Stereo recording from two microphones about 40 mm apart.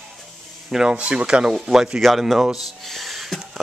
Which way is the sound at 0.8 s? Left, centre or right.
Right.